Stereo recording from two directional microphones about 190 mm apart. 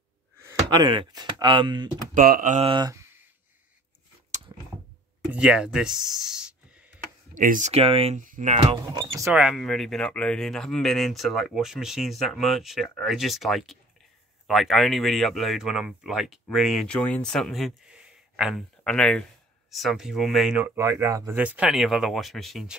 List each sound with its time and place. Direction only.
0.4 s speech: 20° right (ahead or behind)
2.1 s speech: 45° right (ahead or behind)
2.7 s speech: 20° right (ahead or behind)
4.5 s a sound: 20° right (ahead or behind)
5.3 s speech: 5° right (ahead or behind)
7.3 s speech: 45° right (ahead or behind)
8.8 s speech: 20° right (ahead or behind)
9.3 s speech: 5° right (ahead or behind)